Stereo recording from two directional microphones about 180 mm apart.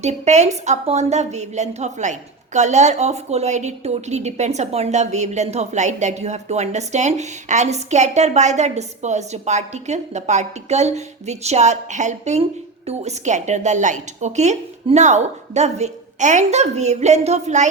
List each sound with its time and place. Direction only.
0.0 s a woman's voice: 40° right (ahead or behind)